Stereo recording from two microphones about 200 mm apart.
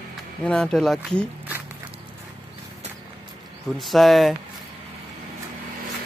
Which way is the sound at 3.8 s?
Centre (ahead or behind).